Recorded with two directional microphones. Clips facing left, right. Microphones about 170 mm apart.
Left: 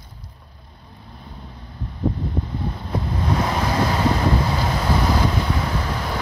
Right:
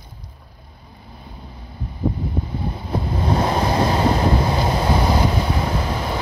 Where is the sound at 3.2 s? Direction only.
30° right (ahead or behind).